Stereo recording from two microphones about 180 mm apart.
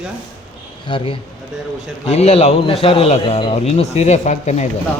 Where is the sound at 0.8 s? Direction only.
25° left (ahead or behind).